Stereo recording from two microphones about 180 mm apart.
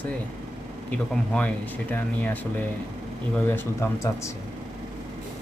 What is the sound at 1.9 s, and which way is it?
Speech, 10° left (ahead or behind).